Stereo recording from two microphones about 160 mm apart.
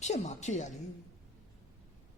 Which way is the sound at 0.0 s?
45° left (ahead or behind).